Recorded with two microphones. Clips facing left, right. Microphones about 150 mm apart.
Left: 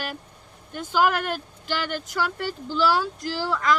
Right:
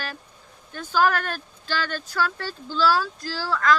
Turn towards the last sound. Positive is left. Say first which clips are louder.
# even
turn(degrees=20)  # may be behind; listen again after turning